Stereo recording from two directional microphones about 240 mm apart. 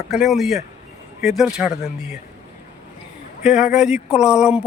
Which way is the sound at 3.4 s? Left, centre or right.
Centre.